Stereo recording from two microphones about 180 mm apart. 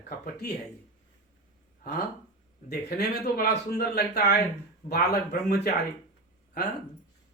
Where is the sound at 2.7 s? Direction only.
60° left (ahead or behind).